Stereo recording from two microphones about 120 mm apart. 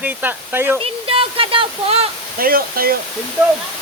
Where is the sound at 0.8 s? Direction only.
50° right (ahead or behind).